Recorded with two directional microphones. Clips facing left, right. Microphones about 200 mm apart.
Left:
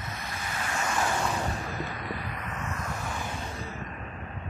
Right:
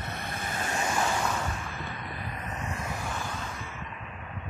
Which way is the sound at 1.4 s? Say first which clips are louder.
Left 3 dB; 40° left (ahead or behind).